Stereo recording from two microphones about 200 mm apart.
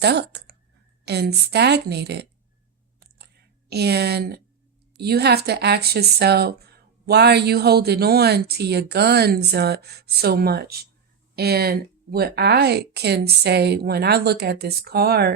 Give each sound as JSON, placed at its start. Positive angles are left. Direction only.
{"t": 0.0, "sound": "a woman's voice", "side_deg": -55}
{"t": 3.7, "sound": "speech", "side_deg": -55}